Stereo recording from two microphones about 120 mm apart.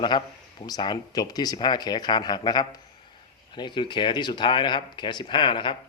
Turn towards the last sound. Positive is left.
turn(degrees=45)  # may be behind; listen again after turning